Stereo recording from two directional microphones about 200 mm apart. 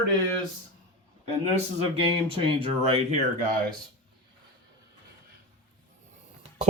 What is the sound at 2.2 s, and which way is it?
Speech, 25° right (ahead or behind).